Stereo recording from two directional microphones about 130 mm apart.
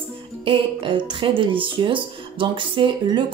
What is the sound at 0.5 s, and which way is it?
Speech, 40° right (ahead or behind).